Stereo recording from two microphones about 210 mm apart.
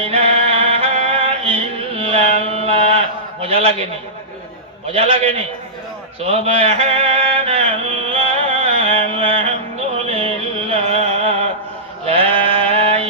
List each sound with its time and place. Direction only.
0.0 s music: 25° right (ahead or behind)
3.4 s a man's voice: 30° right (ahead or behind)
4.9 s a man's voice: 30° right (ahead or behind)
6.2 s mantra: 30° right (ahead or behind)
10.1 s music: 30° right (ahead or behind)
12.0 s sheep: 25° right (ahead or behind)